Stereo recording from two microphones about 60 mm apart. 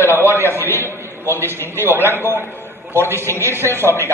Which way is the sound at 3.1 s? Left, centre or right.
Left.